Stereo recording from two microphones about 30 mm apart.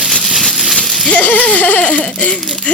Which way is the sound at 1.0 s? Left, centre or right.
Left.